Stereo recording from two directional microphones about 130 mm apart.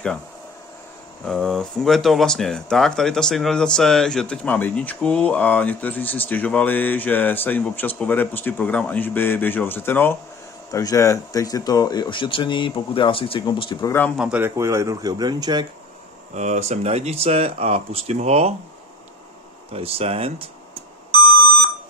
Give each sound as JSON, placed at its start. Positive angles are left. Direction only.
{"t": 1.2, "sound": "speech", "side_deg": 5}
{"t": 10.7, "sound": "speech", "side_deg": 25}
{"t": 14.1, "sound": "a man's voice", "side_deg": -10}
{"t": 14.5, "sound": "speech", "side_deg": -20}
{"t": 16.3, "sound": "speech", "side_deg": -60}
{"t": 19.7, "sound": "speech", "side_deg": -45}